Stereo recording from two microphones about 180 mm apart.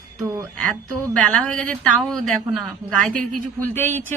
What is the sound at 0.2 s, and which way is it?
Speech, 15° right (ahead or behind).